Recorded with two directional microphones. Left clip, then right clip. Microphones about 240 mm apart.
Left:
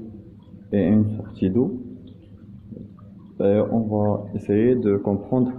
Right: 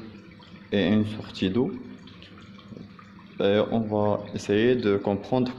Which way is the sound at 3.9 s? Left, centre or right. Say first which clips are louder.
Left 1 dB; centre.